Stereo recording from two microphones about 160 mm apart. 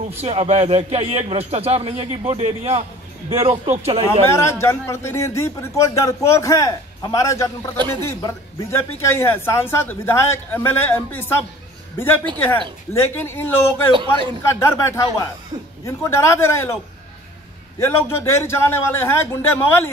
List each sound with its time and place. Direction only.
0.2 s speech: 40° right (ahead or behind)
4.3 s a man's voice: 15° left (ahead or behind)
7.7 s speech: 30° right (ahead or behind)
8.0 s speech: 15° left (ahead or behind)
13.9 s speech: 30° right (ahead or behind)
14.4 s speech: 15° left (ahead or behind)
17.7 s speech: 15° left (ahead or behind)